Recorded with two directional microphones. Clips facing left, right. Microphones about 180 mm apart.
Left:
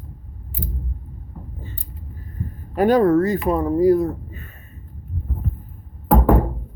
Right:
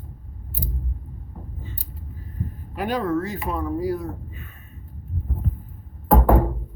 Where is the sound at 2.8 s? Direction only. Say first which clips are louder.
Left 9 dB; 45° left (ahead or behind).